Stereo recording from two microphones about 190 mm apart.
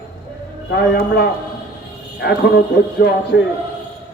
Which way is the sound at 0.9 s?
55° left (ahead or behind).